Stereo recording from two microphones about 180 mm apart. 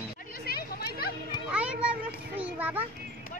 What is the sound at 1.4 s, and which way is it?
Speech, 5° right (ahead or behind).